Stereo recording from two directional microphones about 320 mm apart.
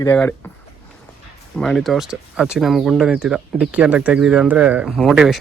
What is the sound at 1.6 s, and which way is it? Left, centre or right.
Speech, centre.